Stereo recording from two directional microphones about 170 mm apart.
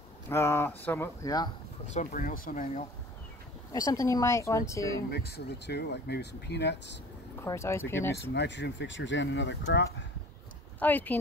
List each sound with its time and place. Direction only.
0.3 s speech: 15° left (ahead or behind)
2.0 s speech: 50° left (ahead or behind)
3.7 s speech: 20° left (ahead or behind)
5.1 s speech: 70° left (ahead or behind)
7.3 s speech: 15° left (ahead or behind)
8.3 s speech: 90° left
10.8 s speech: 10° left (ahead or behind)